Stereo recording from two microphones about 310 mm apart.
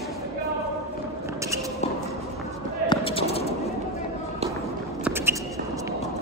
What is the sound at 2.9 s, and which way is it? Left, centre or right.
Basketball bounce, centre.